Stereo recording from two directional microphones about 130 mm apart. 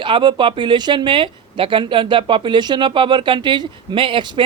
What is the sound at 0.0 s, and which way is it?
Speech, 35° right (ahead or behind).